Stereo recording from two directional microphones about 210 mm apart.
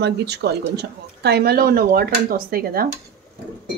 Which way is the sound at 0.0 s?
50° right (ahead or behind).